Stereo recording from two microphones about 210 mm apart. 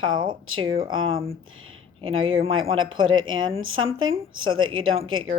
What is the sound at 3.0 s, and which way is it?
A woman's voice, 70° right (ahead or behind).